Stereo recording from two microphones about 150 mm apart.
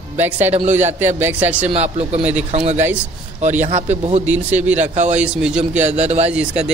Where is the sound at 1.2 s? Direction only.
10° right (ahead or behind).